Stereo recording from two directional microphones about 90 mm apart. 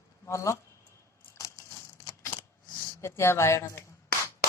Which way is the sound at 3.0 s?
30° left (ahead or behind).